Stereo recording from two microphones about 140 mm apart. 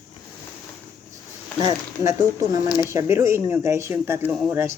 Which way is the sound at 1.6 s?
25° right (ahead or behind).